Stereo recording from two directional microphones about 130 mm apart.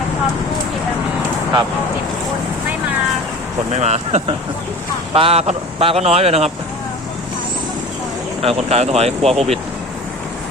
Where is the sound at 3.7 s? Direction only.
60° right (ahead or behind).